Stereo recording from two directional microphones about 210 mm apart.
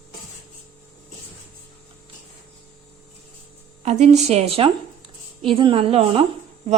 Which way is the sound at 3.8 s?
30° right (ahead or behind).